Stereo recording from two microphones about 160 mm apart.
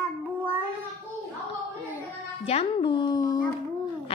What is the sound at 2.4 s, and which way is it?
Music, 35° left (ahead or behind).